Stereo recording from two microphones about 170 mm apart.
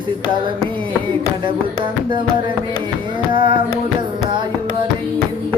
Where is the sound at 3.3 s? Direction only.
30° right (ahead or behind).